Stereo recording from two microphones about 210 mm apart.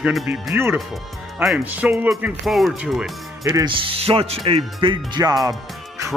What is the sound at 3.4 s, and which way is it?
Speech, 20° right (ahead or behind).